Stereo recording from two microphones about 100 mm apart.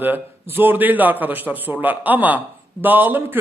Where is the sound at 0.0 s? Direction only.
20° right (ahead or behind).